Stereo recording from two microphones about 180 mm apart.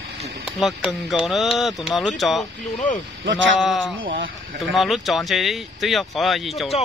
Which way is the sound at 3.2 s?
90° right.